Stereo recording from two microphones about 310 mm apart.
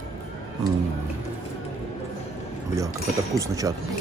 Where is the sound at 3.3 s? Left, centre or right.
Centre.